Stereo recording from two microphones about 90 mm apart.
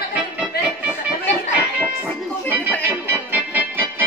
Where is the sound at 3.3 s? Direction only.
20° right (ahead or behind).